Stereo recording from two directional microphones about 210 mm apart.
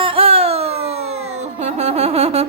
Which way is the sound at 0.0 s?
25° right (ahead or behind).